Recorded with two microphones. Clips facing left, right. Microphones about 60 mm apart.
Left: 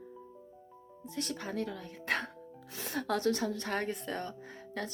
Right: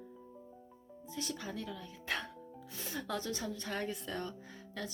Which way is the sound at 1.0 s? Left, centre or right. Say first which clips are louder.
Left 3 dB; left.